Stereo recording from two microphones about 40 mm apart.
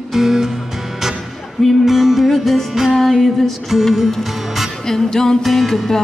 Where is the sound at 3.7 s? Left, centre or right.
Centre.